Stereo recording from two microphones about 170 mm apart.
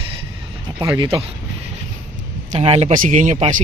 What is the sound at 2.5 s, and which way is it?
Speech, 35° right (ahead or behind).